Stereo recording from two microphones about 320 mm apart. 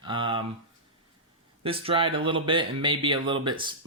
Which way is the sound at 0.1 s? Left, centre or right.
Centre.